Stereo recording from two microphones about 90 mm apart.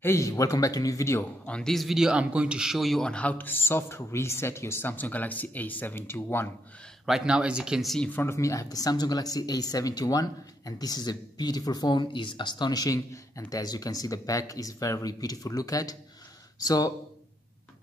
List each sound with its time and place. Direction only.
0.0 s speech: 30° left (ahead or behind)
1.4 s a man's voice: 10° left (ahead or behind); by 6.5 s 25° left (ahead or behind)
7.1 s speech: 10° right (ahead or behind)
8.0 s a man's voice: 20° left (ahead or behind)
8.3 s speech: 35° left (ahead or behind)